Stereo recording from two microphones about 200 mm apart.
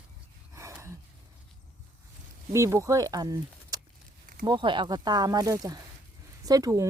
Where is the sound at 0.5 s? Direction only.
15° right (ahead or behind).